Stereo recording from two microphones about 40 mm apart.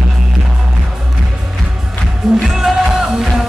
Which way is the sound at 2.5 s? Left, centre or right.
Centre.